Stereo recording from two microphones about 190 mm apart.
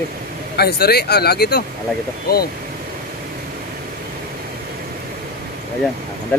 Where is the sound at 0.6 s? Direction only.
55° left (ahead or behind).